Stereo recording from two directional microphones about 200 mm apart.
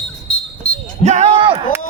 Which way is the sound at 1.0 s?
35° right (ahead or behind).